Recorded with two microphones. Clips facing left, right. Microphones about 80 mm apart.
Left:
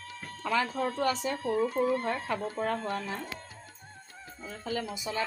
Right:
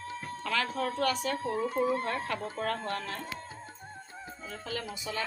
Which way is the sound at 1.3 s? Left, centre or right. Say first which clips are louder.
Left 2 dB; right.